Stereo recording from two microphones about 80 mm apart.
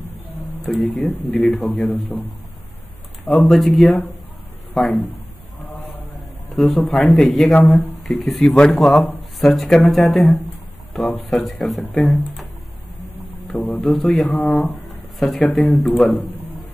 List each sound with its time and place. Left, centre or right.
0.7 s speech: centre
3.3 s speech: centre
6.1 s a man's voice: centre
10.9 s a sound: centre
11.2 s speech: centre
13.6 s speech: left
13.8 s speech: centre
16.1 s a sound: centre